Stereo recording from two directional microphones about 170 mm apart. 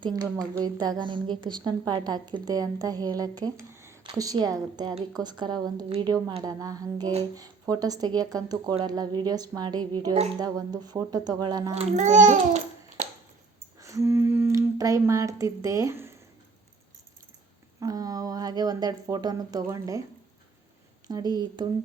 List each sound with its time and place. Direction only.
0.0 s a woman's voice: 25° right (ahead or behind)
11.7 s a child's voice: 40° right (ahead or behind)
13.7 s speech: 20° right (ahead or behind)
17.7 s a woman's voice: 20° right (ahead or behind)
21.1 s a woman's voice: 25° right (ahead or behind)